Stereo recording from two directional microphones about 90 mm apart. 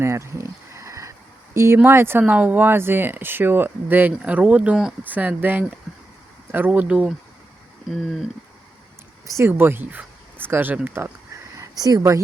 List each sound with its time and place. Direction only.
0.0 s a sound: 30° right (ahead or behind)
1.5 s speech: 30° right (ahead or behind); by 4.9 s 10° right (ahead or behind)
5.0 s speech: 20° right (ahead or behind)
7.9 s speech: centre (ahead or behind)
9.2 s speech: 35° right (ahead or behind)
9.5 s speech: 25° right (ahead or behind)
11.5 s speech: 40° right (ahead or behind)